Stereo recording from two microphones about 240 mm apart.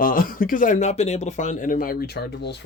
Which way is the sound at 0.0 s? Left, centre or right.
Left.